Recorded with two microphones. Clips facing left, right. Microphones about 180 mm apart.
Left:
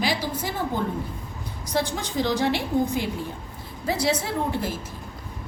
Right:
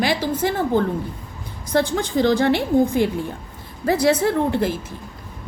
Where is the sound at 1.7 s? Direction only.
55° right (ahead or behind).